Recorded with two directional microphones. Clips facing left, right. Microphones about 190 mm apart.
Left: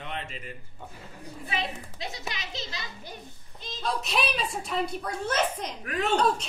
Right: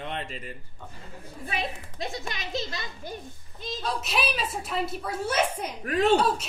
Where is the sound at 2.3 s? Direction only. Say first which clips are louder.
Right 5 dB; 50° right (ahead or behind).